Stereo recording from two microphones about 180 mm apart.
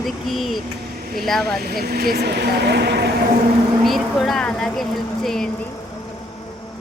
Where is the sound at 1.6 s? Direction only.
60° right (ahead or behind).